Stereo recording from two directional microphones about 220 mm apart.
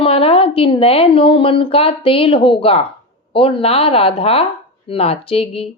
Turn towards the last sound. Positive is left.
turn(degrees=25)  # may be behind; listen again after turning